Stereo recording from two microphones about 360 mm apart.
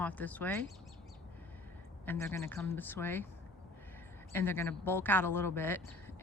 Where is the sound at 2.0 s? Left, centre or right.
Centre.